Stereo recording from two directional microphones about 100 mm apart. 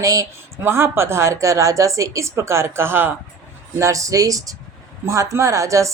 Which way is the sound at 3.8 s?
35° right (ahead or behind).